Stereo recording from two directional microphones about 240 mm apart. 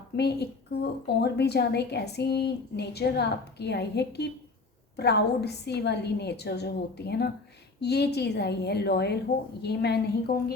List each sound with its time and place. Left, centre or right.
0.2 s a woman's voice: left